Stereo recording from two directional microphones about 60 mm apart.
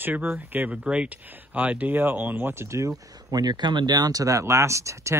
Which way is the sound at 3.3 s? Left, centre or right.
Right.